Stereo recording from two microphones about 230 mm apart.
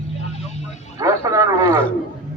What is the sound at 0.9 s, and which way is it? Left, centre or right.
Speech, centre.